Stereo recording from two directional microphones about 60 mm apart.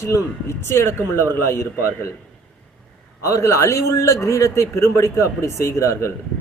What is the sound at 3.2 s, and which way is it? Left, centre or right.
A man's voice, left.